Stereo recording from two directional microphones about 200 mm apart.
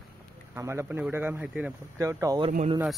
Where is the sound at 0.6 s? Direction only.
15° right (ahead or behind).